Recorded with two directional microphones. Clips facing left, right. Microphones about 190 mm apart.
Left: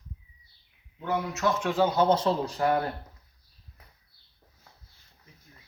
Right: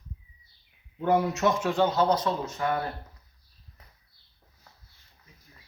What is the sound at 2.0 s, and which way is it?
Speech, 30° left (ahead or behind).